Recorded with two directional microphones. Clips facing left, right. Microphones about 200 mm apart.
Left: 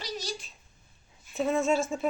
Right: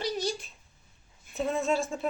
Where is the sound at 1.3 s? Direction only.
Centre (ahead or behind).